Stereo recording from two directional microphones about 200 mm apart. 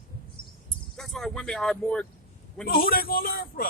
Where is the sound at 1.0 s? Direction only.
Centre (ahead or behind).